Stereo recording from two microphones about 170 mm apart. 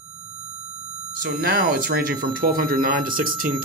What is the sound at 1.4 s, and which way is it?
Speech, 65° right (ahead or behind).